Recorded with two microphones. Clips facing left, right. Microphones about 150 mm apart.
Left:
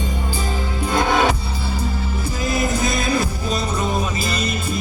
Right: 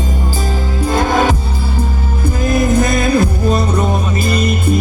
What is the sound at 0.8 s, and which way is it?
Music, 40° right (ahead or behind).